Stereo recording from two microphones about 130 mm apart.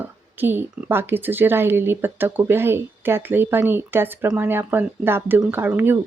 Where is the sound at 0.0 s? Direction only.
15° right (ahead or behind).